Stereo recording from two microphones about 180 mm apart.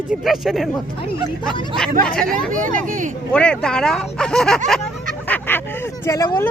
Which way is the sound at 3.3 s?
5° left (ahead or behind).